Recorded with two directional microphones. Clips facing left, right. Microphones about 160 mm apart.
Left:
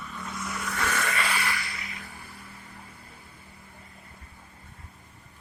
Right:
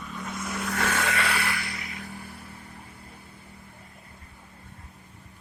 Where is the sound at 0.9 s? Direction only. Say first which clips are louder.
Right 2 dB; 75° right (ahead or behind).